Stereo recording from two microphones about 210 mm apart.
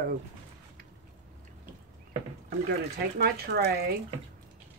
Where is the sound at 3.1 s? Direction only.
45° right (ahead or behind).